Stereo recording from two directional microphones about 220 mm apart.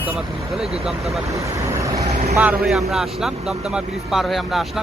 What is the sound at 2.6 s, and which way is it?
Speech, centre (ahead or behind).